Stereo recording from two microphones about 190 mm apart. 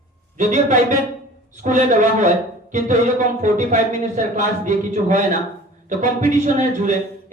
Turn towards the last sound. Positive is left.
turn(degrees=-40)  # may be behind; listen again after turning